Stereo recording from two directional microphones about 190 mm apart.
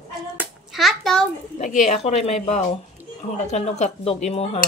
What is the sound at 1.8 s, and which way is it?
Speech, 35° left (ahead or behind).